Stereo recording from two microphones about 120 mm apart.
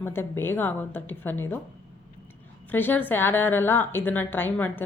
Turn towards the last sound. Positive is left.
turn(degrees=15)  # may be behind; listen again after turning